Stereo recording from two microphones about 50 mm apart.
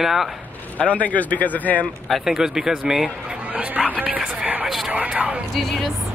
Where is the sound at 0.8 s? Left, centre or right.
Left.